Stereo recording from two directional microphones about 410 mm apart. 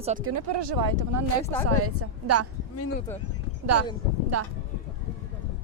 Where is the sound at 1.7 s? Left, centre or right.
Right.